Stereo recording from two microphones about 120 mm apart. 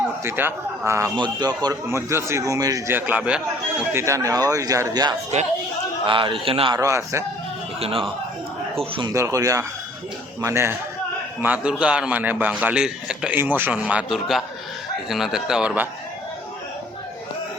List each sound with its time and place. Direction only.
0.3 s a man's voice: 20° right (ahead or behind)
1.1 s a man's voice: 35° right (ahead or behind)
2.9 s a man's voice: 10° right (ahead or behind)
3.9 s a man's voice: 25° right (ahead or behind)
5.3 s speech: 70° right (ahead or behind)
6.1 s a man's voice: 45° right (ahead or behind)
6.7 s a man's voice: 25° right (ahead or behind)
7.8 s a man's voice: 55° right (ahead or behind)
9.1 s a man's voice: 25° right (ahead or behind)
11.4 s a man's voice: 10° right (ahead or behind)